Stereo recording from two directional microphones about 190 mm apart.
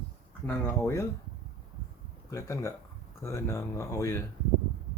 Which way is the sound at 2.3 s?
15° left (ahead or behind).